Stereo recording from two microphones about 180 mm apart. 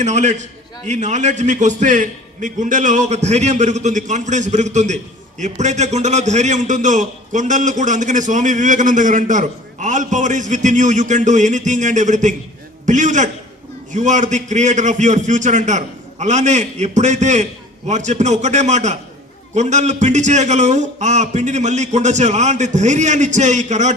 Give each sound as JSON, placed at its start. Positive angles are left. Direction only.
{"t": 0.0, "sound": "a man's voice", "side_deg": -40}